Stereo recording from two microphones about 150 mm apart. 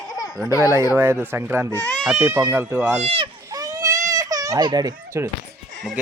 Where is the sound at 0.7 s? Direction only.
15° right (ahead or behind).